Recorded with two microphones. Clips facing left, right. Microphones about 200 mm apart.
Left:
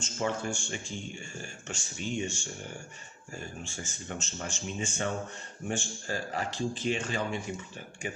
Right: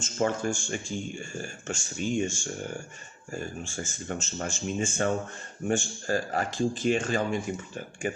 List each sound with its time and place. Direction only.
0.0 s speech: 45° right (ahead or behind)
3.6 s speech: 45° right (ahead or behind)